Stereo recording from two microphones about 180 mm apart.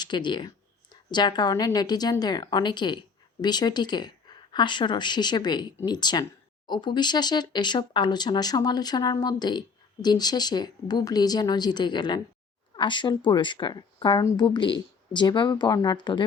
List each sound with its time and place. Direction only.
0.0 s a woman's voice: 25° left (ahead or behind)